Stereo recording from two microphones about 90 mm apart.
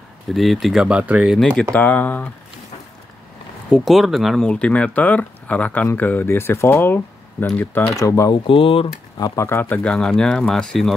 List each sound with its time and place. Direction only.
0.3 s speech: centre (ahead or behind)
1.3 s speech: 10° left (ahead or behind)
3.7 s speech: centre (ahead or behind)
4.5 s speech: 10° left (ahead or behind)
7.9 s speech: 35° left (ahead or behind)
8.5 s speech: 90° left
9.2 s speech: 40° left (ahead or behind)
9.5 s speech: 20° left (ahead or behind)
9.8 s speech: 5° left (ahead or behind)